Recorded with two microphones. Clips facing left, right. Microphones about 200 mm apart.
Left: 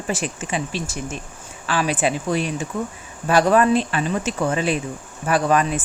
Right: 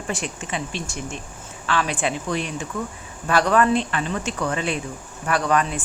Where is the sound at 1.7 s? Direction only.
10° left (ahead or behind).